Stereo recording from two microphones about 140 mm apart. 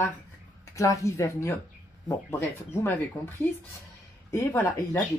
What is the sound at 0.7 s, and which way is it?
Speech, 20° left (ahead or behind).